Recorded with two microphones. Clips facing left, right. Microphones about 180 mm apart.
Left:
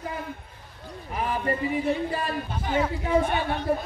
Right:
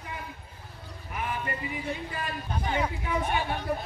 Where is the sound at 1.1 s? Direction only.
35° left (ahead or behind).